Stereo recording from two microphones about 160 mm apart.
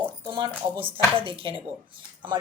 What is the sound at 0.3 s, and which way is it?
Speech, 30° right (ahead or behind).